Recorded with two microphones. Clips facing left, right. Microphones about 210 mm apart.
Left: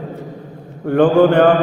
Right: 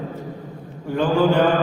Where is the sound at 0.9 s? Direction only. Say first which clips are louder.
Left 7 dB; 60° left (ahead or behind).